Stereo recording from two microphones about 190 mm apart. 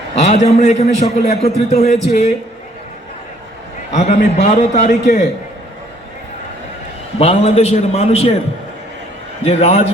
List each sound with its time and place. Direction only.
0.2 s a man's voice: 40° left (ahead or behind)
3.9 s a man's voice: 35° left (ahead or behind)
7.2 s a man's voice: 35° left (ahead or behind)
9.4 s a man's voice: 35° left (ahead or behind)